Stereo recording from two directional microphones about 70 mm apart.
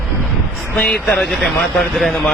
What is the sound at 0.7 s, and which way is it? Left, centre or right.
Speech, centre.